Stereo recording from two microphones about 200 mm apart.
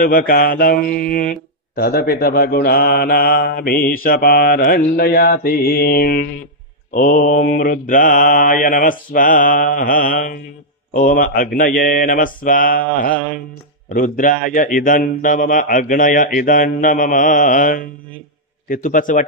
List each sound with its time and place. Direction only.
0.0 s mantra: 45° left (ahead or behind)
18.7 s a man's voice: 40° left (ahead or behind)